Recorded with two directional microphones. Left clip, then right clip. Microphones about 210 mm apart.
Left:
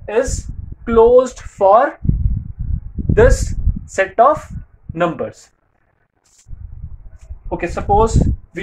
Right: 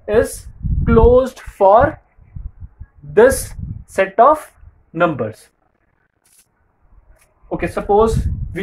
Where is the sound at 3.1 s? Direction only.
25° right (ahead or behind).